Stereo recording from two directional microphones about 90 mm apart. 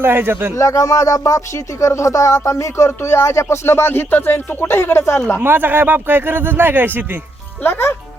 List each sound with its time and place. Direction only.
0.0 s speech: 25° right (ahead or behind)
0.5 s speech: 35° left (ahead or behind)
5.4 s speech: 20° right (ahead or behind)
7.6 s a child's voice: 25° left (ahead or behind)